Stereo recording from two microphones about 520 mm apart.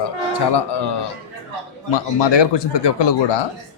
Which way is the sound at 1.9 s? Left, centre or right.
Left.